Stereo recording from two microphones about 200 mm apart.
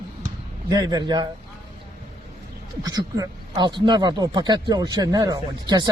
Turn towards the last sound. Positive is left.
turn(degrees=-20)  # may be behind; listen again after turning